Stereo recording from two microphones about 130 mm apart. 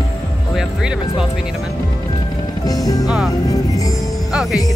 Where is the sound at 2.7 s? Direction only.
25° left (ahead or behind).